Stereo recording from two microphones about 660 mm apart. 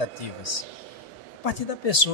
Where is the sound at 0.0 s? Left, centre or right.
Left.